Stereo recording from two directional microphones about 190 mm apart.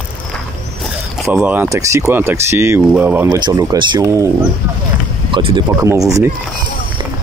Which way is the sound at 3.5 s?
25° right (ahead or behind).